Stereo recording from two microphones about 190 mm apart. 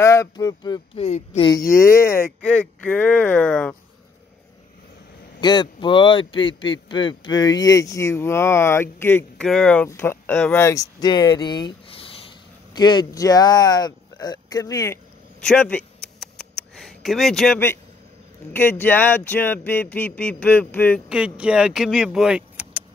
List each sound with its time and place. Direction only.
0.0 s speech: 15° left (ahead or behind)
0.9 s speech: 35° left (ahead or behind)
1.8 s speech: 15° left (ahead or behind)
5.4 s speech: 25° left (ahead or behind)
15.4 s a sound: 5° left (ahead or behind)
18.5 s speech: 10° left (ahead or behind)
21.1 s speech: 5° right (ahead or behind)